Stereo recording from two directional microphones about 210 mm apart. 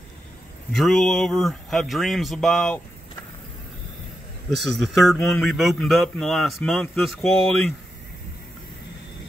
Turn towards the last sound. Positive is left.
turn(degrees=0)  # may be behind; listen again after turning